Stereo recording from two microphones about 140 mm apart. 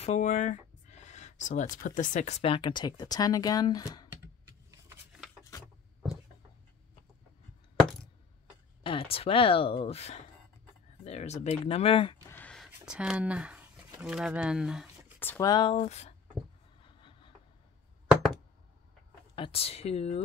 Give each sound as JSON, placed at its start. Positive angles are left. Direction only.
{"t": 0.0, "sound": "speech", "side_deg": 60}
{"t": 8.8, "sound": "speech", "side_deg": 45}
{"t": 12.3, "sound": "a sound", "side_deg": 15}
{"t": 12.5, "sound": "a sound", "side_deg": -5}
{"t": 14.0, "sound": "speech", "side_deg": -5}
{"t": 15.1, "sound": "speech", "side_deg": 15}
{"t": 15.4, "sound": "speech", "side_deg": 30}
{"t": 15.8, "sound": "speech", "side_deg": 50}
{"t": 16.8, "sound": "a sound", "side_deg": 35}
{"t": 19.3, "sound": "speech", "side_deg": 40}